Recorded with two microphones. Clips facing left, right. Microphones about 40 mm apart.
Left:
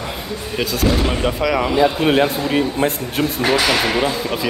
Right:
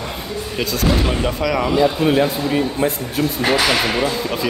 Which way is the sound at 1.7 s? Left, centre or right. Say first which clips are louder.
Even; left.